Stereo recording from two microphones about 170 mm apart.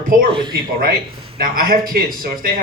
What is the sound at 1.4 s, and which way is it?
Speech, 60° right (ahead or behind).